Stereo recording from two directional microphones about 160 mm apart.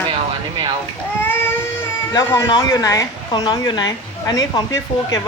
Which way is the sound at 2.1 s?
25° left (ahead or behind).